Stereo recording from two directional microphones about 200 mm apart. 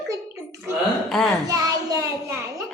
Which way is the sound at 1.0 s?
Centre (ahead or behind).